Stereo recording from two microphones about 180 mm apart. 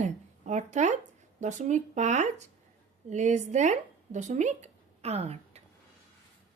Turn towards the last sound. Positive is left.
turn(degrees=-35)  # may be behind; listen again after turning